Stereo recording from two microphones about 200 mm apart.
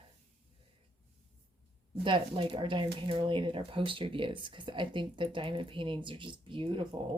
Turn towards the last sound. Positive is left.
turn(degrees=-25)  # may be behind; listen again after turning